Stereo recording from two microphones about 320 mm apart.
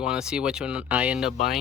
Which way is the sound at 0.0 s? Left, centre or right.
Centre.